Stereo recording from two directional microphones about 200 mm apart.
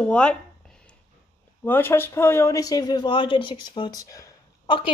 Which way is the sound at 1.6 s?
10° left (ahead or behind).